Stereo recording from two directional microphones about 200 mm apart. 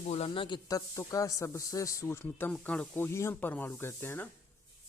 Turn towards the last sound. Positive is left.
turn(degrees=10)  # may be behind; listen again after turning